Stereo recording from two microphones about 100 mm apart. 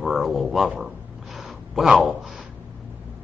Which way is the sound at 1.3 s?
Centre (ahead or behind).